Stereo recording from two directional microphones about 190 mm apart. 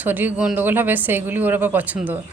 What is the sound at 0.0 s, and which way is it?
Speech, 10° right (ahead or behind).